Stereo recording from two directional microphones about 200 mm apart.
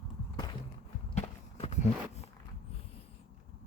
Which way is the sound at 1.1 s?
35° left (ahead or behind).